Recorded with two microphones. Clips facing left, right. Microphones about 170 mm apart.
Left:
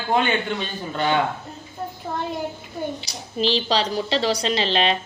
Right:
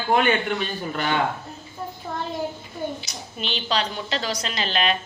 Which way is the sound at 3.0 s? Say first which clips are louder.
Left 9 dB; 30° left (ahead or behind).